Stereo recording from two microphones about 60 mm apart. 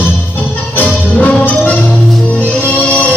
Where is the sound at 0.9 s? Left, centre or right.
Left.